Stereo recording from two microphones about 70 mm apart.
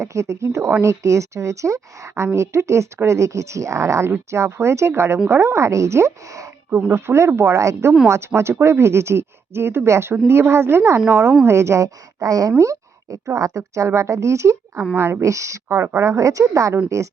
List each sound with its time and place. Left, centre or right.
0.0 s a woman's voice: right
6.7 s speech: right
6.9 s a woman's voice: right
15.2 s a woman's voice: right
15.7 s speech: right
16.0 s a woman's voice: right